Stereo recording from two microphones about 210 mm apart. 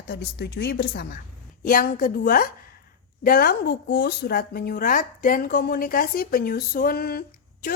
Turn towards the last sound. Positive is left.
turn(degrees=45)  # may be behind; listen again after turning